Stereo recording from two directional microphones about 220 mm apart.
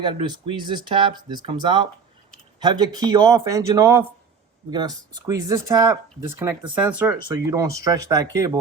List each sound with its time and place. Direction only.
0.0 s speech: 25° right (ahead or behind)